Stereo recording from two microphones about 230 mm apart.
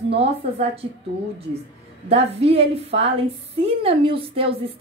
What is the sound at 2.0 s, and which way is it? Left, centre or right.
A woman's voice, right.